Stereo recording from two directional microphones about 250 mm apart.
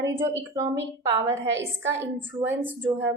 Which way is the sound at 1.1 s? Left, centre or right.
Centre.